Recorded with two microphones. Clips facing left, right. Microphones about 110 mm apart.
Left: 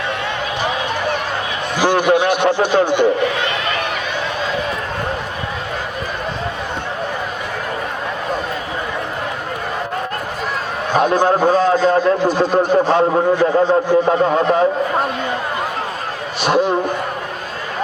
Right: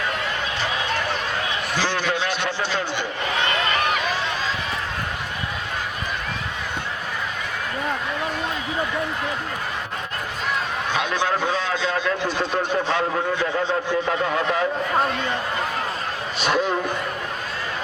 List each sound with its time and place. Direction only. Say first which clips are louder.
1.8 s speech: left 12 dB; 15° left (ahead or behind)
10.9 s a man's voice: left 10 dB; 45° left (ahead or behind)